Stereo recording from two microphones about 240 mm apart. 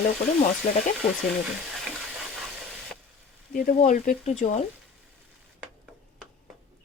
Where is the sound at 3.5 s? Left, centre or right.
Left.